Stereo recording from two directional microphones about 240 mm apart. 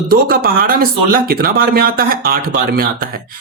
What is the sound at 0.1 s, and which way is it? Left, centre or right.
Speech, right.